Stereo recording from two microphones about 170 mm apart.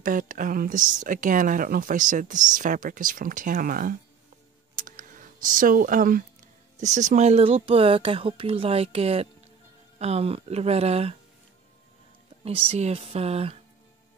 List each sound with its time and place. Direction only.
0.0 s speech: 50° right (ahead or behind)
4.7 s a sound: 50° right (ahead or behind)
6.8 s speech: 45° right (ahead or behind)
12.4 s speech: 35° right (ahead or behind)